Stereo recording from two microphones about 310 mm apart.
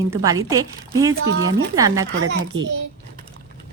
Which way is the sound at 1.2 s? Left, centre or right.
Right.